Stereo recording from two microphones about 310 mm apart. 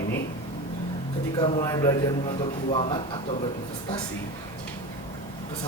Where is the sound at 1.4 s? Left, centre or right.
Centre.